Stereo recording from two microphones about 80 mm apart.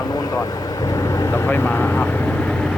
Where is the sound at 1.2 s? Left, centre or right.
Left.